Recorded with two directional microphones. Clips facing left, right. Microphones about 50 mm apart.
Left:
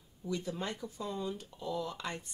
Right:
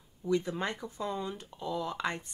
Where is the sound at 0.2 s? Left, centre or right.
Right.